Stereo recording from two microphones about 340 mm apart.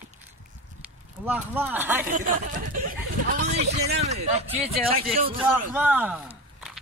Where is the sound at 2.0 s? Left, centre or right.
Right.